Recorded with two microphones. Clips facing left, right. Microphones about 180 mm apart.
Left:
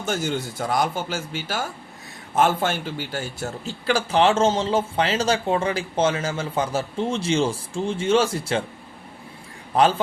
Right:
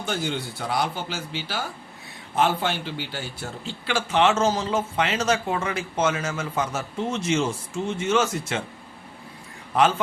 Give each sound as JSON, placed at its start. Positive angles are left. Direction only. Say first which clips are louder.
{"t": 0.0, "sound": "a man's voice", "louder": "left 3 dB", "side_deg": 45}
{"t": 9.7, "sound": "a man's voice", "louder": "left 2 dB", "side_deg": 35}